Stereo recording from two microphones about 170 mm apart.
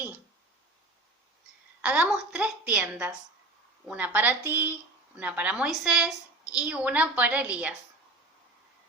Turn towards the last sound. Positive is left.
turn(degrees=-10)  # may be behind; listen again after turning